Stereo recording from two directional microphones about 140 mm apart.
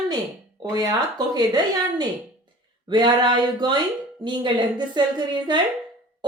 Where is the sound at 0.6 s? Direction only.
25° right (ahead or behind).